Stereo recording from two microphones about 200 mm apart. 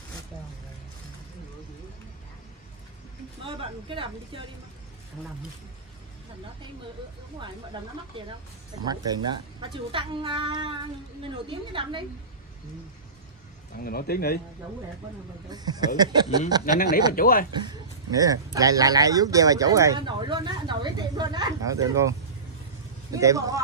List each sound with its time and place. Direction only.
3.4 s a woman's voice: 25° right (ahead or behind)
8.8 s a woman's voice: 20° right (ahead or behind)
13.7 s a man's voice: 50° left (ahead or behind)
15.5 s a woman's voice: 20° right (ahead or behind)
17.1 s a man's voice: 45° left (ahead or behind)
17.6 s speech: 15° right (ahead or behind)
23.1 s speech: 15° right (ahead or behind)